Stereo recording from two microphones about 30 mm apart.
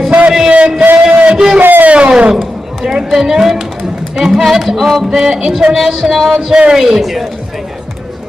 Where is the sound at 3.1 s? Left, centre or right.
Centre.